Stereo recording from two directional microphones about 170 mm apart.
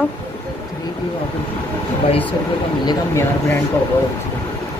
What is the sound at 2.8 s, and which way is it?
Speech, 25° left (ahead or behind).